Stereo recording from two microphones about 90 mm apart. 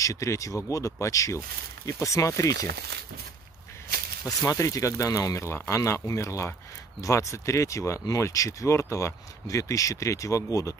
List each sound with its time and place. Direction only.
0.0 s speech: 35° left (ahead or behind)
4.4 s speech: 40° left (ahead or behind)